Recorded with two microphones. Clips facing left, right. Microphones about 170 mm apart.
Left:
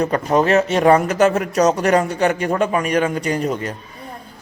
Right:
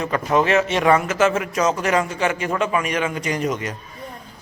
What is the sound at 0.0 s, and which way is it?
A man's voice, 40° left (ahead or behind).